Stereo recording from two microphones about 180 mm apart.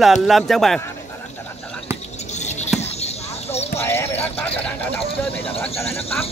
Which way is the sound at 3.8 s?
15° left (ahead or behind).